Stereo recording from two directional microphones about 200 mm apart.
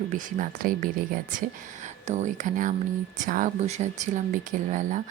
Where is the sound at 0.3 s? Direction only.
40° right (ahead or behind).